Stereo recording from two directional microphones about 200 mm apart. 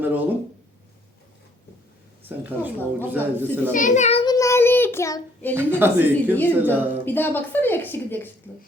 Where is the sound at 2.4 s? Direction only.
10° right (ahead or behind).